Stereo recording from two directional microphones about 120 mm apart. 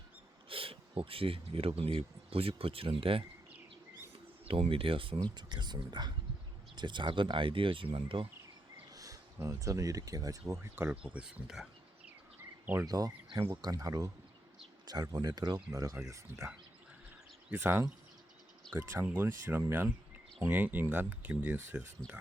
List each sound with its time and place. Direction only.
0.4 s speech: 50° right (ahead or behind)
4.4 s speech: 50° right (ahead or behind)
8.9 s speech: 30° right (ahead or behind)
11.0 s speech: 10° right (ahead or behind)
12.8 s speech: 30° right (ahead or behind)
17.5 s speech: 15° right (ahead or behind)